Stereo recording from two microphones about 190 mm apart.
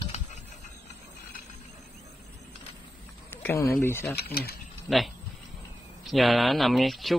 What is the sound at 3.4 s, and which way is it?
Speech, 15° left (ahead or behind).